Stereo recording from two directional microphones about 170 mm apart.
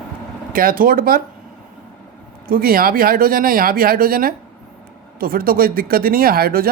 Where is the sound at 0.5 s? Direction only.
55° right (ahead or behind).